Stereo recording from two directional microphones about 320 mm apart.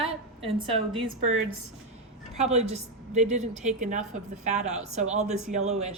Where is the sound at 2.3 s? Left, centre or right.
Right.